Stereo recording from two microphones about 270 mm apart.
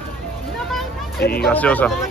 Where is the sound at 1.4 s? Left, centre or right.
Centre.